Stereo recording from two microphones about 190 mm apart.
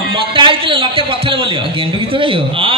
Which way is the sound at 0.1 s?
25° right (ahead or behind).